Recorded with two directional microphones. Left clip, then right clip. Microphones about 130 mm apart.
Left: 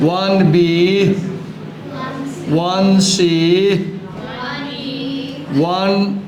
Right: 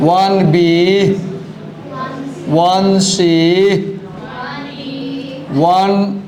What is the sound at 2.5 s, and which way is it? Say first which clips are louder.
Speech: right 5 dB; 35° right (ahead or behind).